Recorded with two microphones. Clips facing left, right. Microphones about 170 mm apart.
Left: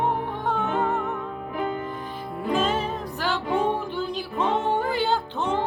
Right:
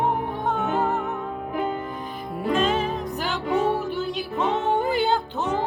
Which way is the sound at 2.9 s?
20° right (ahead or behind).